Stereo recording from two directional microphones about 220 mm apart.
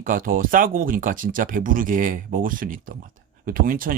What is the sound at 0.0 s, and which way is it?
Speech, 40° right (ahead or behind).